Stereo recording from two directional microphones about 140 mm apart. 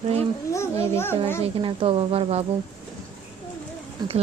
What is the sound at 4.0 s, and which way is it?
Speech, 30° right (ahead or behind).